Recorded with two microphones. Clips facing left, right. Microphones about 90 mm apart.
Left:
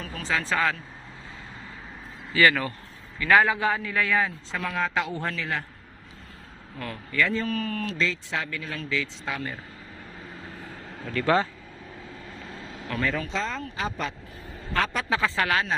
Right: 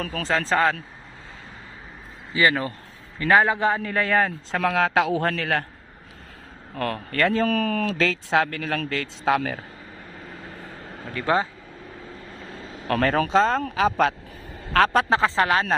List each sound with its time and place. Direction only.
0.3 s speech: 30° right (ahead or behind)
2.3 s a man's voice: 25° right (ahead or behind); by 4.6 s 50° right (ahead or behind)
4.6 s speech: 75° right (ahead or behind)
5.4 s speech: 65° right (ahead or behind)
6.7 s speech: 65° right (ahead or behind)
11.1 s speech: 15° right (ahead or behind)
12.9 s speech: 60° right (ahead or behind)
13.6 s speech: 80° right
15.1 s a man's voice: 30° right (ahead or behind)